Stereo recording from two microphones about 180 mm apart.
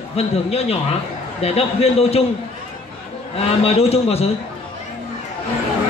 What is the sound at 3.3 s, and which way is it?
Speech, 35° left (ahead or behind).